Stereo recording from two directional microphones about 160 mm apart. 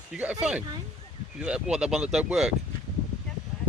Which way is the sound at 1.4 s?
5° right (ahead or behind).